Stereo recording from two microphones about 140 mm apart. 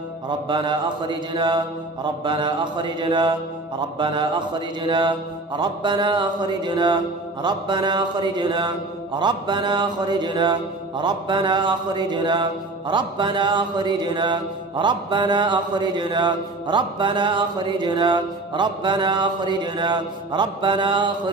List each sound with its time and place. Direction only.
0.5 s mantra: 35° right (ahead or behind)